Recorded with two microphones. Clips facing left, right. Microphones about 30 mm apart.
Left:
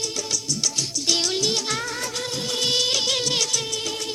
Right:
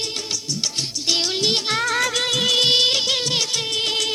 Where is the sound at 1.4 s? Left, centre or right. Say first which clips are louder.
Right 4 dB; right.